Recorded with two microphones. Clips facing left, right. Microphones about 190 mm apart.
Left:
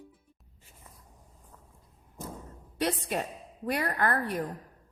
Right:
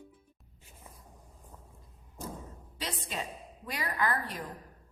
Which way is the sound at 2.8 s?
60° left (ahead or behind).